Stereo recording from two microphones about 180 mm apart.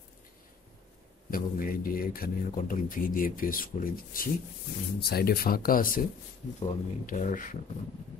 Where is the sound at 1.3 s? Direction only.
55° left (ahead or behind).